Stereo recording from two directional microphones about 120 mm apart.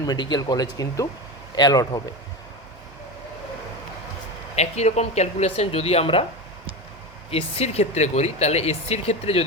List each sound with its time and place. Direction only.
0.0 s speech: 35° left (ahead or behind)
4.5 s speech: 65° left (ahead or behind)
7.3 s speech: 55° left (ahead or behind)